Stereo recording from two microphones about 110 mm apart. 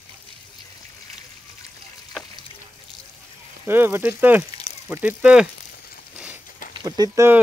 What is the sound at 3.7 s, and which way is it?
Speech, 20° right (ahead or behind).